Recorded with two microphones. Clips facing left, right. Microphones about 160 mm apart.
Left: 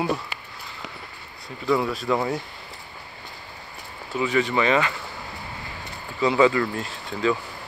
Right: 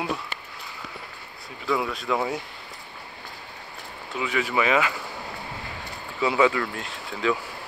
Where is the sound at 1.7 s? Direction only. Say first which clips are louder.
Left 3 dB; centre (ahead or behind).